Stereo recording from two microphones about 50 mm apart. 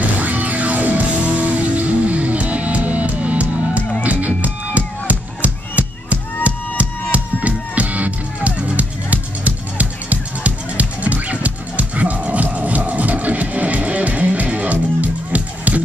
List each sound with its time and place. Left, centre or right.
0.2 s music: right